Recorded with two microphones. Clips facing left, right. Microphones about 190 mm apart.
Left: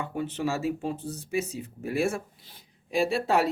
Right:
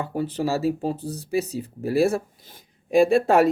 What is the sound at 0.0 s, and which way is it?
Speech, 35° right (ahead or behind).